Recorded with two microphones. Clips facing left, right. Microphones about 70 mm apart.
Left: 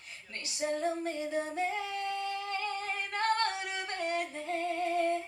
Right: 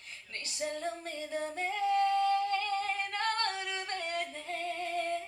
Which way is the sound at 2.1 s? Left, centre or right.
Right.